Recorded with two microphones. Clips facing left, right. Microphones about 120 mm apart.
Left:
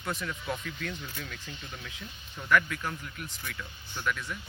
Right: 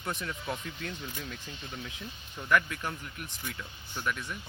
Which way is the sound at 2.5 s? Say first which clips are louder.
Left 1 dB; 25° right (ahead or behind).